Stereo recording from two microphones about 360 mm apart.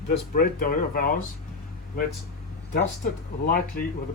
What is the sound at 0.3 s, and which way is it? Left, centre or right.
Speech, left.